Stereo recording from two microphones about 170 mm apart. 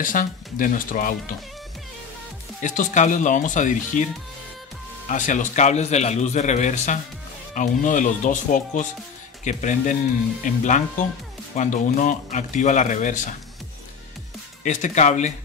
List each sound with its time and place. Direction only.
0.0 s a man's voice: 55° left (ahead or behind)
2.6 s a man's voice: 50° left (ahead or behind)
5.0 s a man's voice: 45° left (ahead or behind)
14.6 s a man's voice: 45° left (ahead or behind)